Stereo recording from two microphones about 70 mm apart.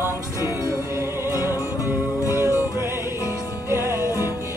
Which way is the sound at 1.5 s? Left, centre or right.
Left.